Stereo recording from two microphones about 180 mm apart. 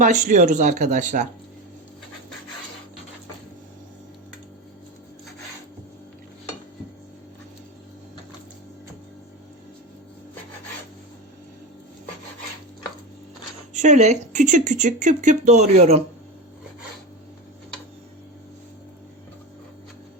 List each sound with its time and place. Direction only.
0.0 s speech: 45° right (ahead or behind)
13.7 s speech: 40° right (ahead or behind)